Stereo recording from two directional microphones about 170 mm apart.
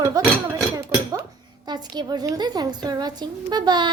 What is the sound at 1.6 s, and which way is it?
Speech, 25° right (ahead or behind).